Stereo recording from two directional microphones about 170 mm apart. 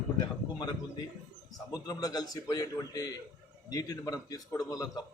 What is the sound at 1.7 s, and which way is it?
A man's voice, 20° left (ahead or behind).